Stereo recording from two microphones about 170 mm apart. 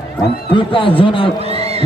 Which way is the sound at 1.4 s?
35° right (ahead or behind).